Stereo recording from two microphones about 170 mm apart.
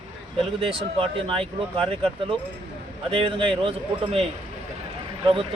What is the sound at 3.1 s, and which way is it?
Speech, 30° right (ahead or behind).